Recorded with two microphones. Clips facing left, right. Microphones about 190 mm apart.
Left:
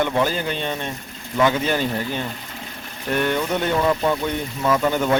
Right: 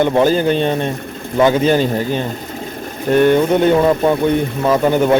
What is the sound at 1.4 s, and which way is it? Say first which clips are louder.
Speech: right 7 dB; 30° right (ahead or behind).